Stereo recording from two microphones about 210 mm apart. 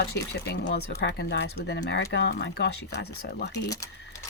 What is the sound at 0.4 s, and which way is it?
Speech, 50° left (ahead or behind).